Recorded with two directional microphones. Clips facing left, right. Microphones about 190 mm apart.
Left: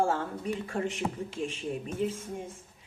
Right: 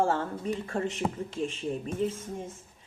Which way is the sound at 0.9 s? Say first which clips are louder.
Right 2 dB; 35° right (ahead or behind).